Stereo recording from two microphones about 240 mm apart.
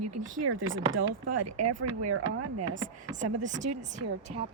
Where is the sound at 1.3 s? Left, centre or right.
Right.